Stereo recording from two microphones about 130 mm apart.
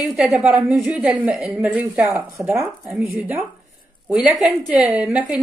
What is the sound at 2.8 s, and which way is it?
Speech, centre (ahead or behind).